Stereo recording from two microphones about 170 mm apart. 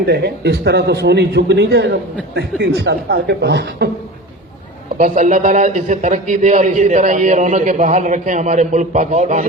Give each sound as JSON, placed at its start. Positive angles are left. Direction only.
{"t": 0.0, "sound": "a man's voice", "side_deg": -75}
{"t": 4.9, "sound": "a man's voice", "side_deg": -50}